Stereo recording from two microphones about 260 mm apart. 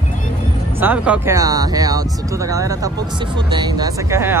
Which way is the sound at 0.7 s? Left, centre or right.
Centre.